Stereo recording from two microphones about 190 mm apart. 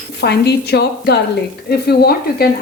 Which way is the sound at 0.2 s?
60° left (ahead or behind).